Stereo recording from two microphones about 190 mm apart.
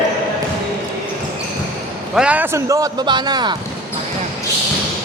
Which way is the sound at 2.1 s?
5° right (ahead or behind).